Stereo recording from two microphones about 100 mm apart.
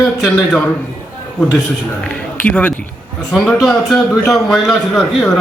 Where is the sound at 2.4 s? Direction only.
15° left (ahead or behind).